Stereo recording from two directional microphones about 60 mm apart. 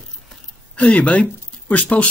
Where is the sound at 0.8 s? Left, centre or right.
Left.